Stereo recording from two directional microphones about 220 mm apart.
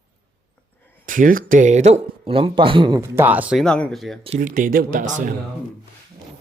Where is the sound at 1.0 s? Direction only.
40° right (ahead or behind); by 4.2 s centre (ahead or behind).